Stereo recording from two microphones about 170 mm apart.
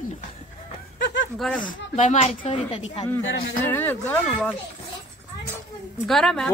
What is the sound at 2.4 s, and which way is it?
Speech, 35° left (ahead or behind).